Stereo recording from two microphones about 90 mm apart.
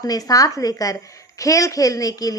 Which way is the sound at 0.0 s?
45° left (ahead or behind).